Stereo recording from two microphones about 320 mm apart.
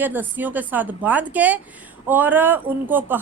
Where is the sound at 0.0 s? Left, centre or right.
Centre.